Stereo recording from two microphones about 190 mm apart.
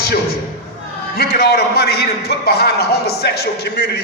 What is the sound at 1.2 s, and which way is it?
A man's voice, 60° left (ahead or behind).